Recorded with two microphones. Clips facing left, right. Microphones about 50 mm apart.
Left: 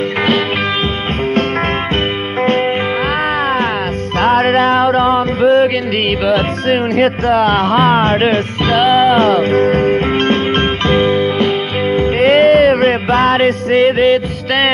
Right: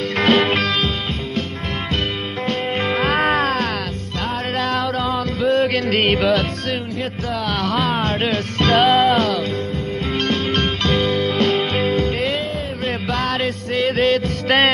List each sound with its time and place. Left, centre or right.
4.2 s music: left
5.0 s music: left
7.0 s speech: left
8.6 s music: centre
9.1 s speech: left
9.6 s music: left
10.2 s music: left
12.4 s a sound: left
12.8 s music: left
13.8 s music: left